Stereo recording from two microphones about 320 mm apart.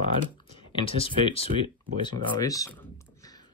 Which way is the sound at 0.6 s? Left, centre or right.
Centre.